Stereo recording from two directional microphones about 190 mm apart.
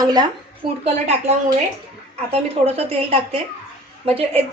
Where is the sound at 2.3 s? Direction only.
30° right (ahead or behind).